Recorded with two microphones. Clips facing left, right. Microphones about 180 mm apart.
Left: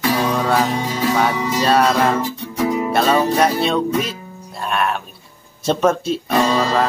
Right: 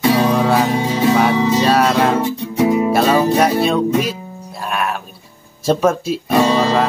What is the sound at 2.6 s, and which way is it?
Music, 20° right (ahead or behind).